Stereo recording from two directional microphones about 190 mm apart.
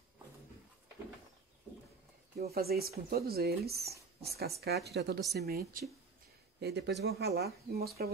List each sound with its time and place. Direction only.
2.5 s a woman's voice: 55° right (ahead or behind)
6.6 s speech: 65° right (ahead or behind)